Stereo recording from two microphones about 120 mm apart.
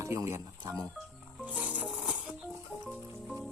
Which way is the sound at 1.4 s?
10° right (ahead or behind).